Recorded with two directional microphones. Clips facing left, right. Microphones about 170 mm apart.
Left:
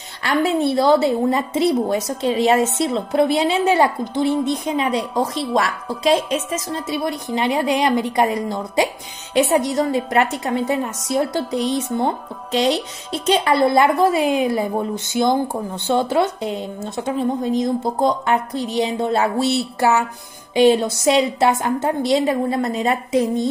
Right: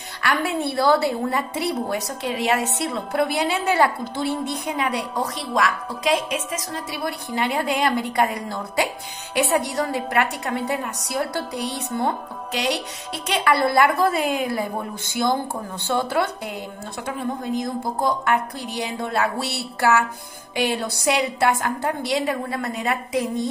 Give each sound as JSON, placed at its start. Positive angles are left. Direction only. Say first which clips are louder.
{"t": 0.2, "sound": "a woman's voice", "louder": "left 5 dB", "side_deg": 25}